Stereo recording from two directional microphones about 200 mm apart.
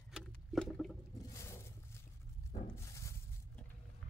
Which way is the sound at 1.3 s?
15° left (ahead or behind).